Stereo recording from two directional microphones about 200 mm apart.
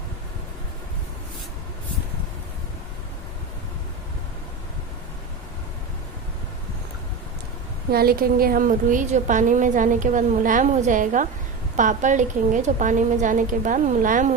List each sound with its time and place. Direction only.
7.9 s a woman's voice: 50° right (ahead or behind)